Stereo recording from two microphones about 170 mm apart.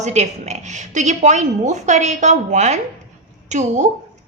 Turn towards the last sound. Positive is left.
turn(degrees=-45)  # may be behind; listen again after turning